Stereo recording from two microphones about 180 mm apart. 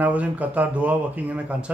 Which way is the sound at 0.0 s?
10° right (ahead or behind).